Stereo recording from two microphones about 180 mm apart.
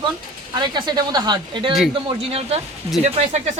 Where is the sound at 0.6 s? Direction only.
25° right (ahead or behind).